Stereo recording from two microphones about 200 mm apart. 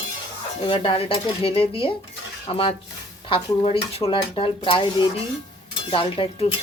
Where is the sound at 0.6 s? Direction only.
25° left (ahead or behind).